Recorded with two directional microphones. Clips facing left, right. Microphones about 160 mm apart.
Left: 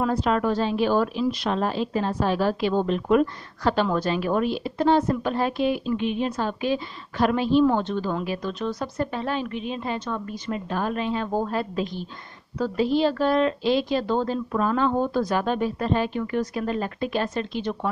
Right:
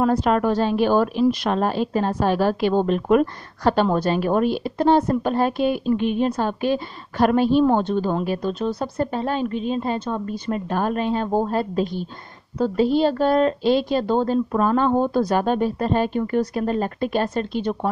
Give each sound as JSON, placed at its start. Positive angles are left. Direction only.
{"t": 0.0, "sound": "a woman's voice", "side_deg": -50}
{"t": 12.5, "sound": "a woman's voice", "side_deg": -25}